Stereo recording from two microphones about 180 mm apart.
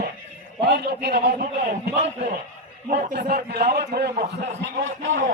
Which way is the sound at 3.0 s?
60° right (ahead or behind).